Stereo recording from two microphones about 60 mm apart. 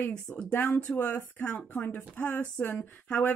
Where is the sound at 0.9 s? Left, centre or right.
Left.